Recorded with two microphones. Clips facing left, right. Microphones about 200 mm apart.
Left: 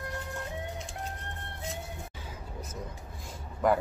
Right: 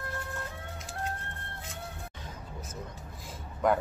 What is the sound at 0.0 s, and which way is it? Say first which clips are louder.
Music: left 1 dB; 15° left (ahead or behind).